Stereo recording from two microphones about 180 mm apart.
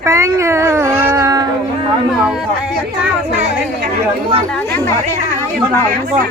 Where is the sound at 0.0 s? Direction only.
15° right (ahead or behind).